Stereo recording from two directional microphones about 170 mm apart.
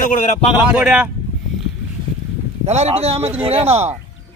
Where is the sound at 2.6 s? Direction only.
40° right (ahead or behind).